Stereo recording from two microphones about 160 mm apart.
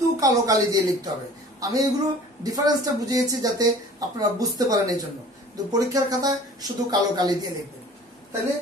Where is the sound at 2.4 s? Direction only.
25° right (ahead or behind).